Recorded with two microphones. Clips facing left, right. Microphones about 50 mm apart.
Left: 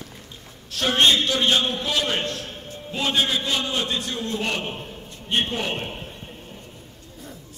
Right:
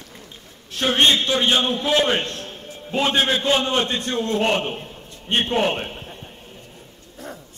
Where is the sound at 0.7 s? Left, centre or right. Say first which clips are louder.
Right 1 dB; right.